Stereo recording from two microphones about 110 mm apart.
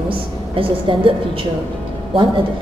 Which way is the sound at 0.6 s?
55° right (ahead or behind).